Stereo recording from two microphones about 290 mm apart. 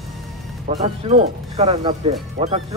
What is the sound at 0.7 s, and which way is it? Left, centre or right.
Speech, right.